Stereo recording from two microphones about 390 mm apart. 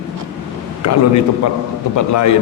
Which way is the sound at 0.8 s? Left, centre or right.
Left.